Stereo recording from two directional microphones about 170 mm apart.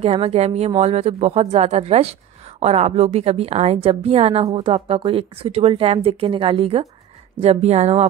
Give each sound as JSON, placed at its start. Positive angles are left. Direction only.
{"t": 0.0, "sound": "speech", "side_deg": -35}